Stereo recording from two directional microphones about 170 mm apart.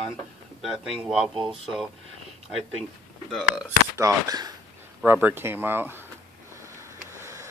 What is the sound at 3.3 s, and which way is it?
Speech, 5° right (ahead or behind).